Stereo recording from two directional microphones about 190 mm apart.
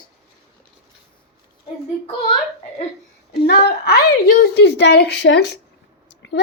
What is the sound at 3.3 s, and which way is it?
A woman's voice, 60° left (ahead or behind).